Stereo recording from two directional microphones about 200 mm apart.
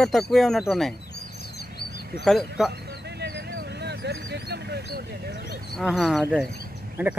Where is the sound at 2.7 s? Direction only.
55° right (ahead or behind).